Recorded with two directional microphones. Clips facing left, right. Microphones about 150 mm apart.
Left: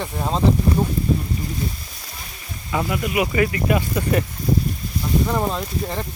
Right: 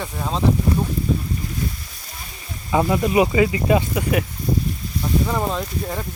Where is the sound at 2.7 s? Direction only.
30° right (ahead or behind).